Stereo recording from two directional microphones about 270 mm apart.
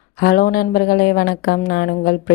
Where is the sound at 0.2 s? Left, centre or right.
Left.